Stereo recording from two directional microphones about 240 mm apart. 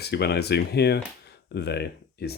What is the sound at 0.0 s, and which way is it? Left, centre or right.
Speech, left.